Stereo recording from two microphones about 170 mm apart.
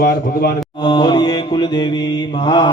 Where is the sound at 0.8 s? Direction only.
25° left (ahead or behind).